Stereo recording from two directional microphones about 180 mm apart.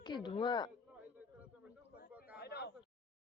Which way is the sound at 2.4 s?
65° left (ahead or behind).